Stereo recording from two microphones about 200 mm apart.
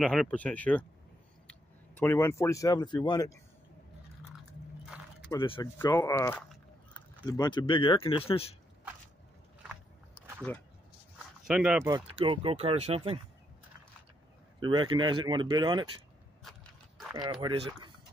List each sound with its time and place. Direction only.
0.0 s speech: centre (ahead or behind)
5.3 s speech: 20° left (ahead or behind)
11.4 s speech: 5° right (ahead or behind)
12.2 s speech: 30° right (ahead or behind)
14.6 s speech: 20° right (ahead or behind)
17.1 s speech: 20° right (ahead or behind)